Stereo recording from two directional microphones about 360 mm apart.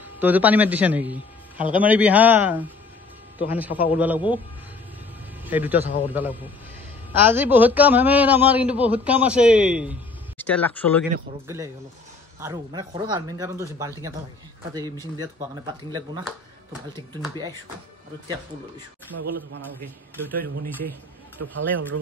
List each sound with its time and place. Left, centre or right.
0.2 s a man's voice: centre
5.4 s a man's voice: centre
11.4 s speech: centre
15.1 s speech: centre
19.3 s speech: right